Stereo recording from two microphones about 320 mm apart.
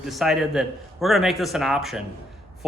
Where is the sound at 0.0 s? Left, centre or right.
Centre.